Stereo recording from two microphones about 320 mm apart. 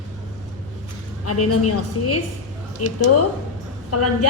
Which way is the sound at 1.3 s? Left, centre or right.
Left.